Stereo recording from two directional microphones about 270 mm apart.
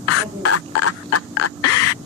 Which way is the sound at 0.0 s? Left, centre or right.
Left.